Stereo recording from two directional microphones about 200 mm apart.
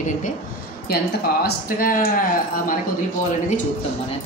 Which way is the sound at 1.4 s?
45° left (ahead or behind).